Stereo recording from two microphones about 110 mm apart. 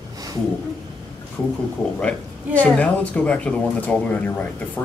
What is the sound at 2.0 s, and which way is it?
Speech, 10° left (ahead or behind).